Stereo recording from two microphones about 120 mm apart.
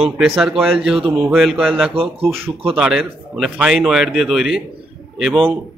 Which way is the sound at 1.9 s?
50° right (ahead or behind).